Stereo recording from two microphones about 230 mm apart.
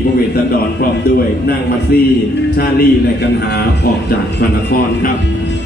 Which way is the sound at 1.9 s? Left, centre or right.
Left.